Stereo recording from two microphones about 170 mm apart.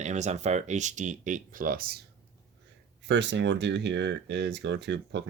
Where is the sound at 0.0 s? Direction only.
45° right (ahead or behind); by 2.0 s 60° right (ahead or behind).